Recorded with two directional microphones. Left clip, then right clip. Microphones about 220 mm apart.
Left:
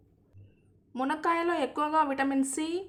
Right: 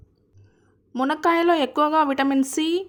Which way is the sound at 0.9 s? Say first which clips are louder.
Right 8 dB; 25° right (ahead or behind).